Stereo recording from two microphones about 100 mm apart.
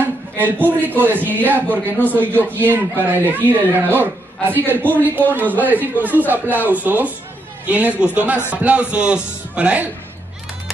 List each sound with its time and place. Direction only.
0.7 s a man's voice: 20° right (ahead or behind)